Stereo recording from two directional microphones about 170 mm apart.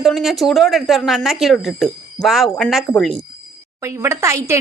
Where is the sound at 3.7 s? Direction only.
15° right (ahead or behind).